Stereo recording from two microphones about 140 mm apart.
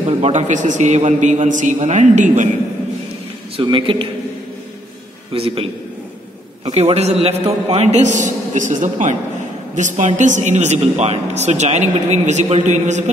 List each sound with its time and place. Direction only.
0.2 s speech: 55° right (ahead or behind)
3.6 s a man's voice: 35° right (ahead or behind)
5.3 s a man's voice: 40° right (ahead or behind)
6.7 s a man's voice: 50° right (ahead or behind)